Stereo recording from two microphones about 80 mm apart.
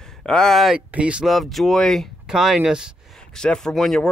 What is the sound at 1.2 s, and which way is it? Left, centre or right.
Speech, centre.